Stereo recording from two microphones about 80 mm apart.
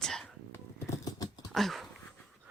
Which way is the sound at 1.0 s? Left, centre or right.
Left.